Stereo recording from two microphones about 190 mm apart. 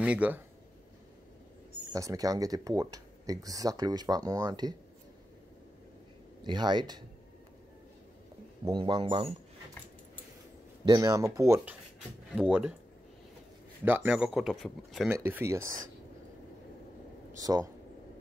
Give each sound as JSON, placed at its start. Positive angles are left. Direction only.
{"t": 0.0, "sound": "speech", "side_deg": -5}
{"t": 1.9, "sound": "speech", "side_deg": -15}
{"t": 6.4, "sound": "speech", "side_deg": -25}
{"t": 8.6, "sound": "speech", "side_deg": -25}
{"t": 10.9, "sound": "speech", "side_deg": -20}
{"t": 12.4, "sound": "speech", "side_deg": -5}
{"t": 13.8, "sound": "speech", "side_deg": -10}
{"t": 15.0, "sound": "speech", "side_deg": -10}
{"t": 17.4, "sound": "speech", "side_deg": -20}